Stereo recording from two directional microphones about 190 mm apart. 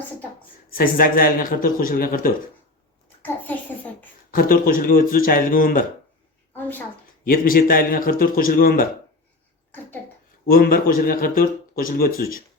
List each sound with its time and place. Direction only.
0.7 s speech: 50° left (ahead or behind)
3.2 s a sound: 10° left (ahead or behind)
4.3 s speech: 50° left (ahead or behind)
6.6 s speech: 10° left (ahead or behind)
7.3 s speech: 50° left (ahead or behind)
10.4 s speech: 50° left (ahead or behind)